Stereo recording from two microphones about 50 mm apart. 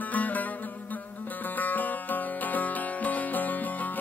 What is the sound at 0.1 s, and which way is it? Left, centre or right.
Music, left.